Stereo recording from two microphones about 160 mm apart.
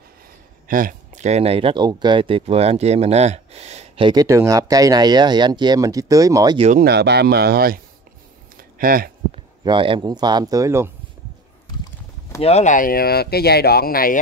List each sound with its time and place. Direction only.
0.7 s speech: 60° right (ahead or behind); by 6.6 s 25° right (ahead or behind)
6.8 s speech: 90° right; by 7.8 s 70° right (ahead or behind)
8.5 s a sound: 65° right (ahead or behind)
9.3 s speech: 30° right (ahead or behind)
12.4 s speech: 40° left (ahead or behind); by 14.2 s 65° left (ahead or behind)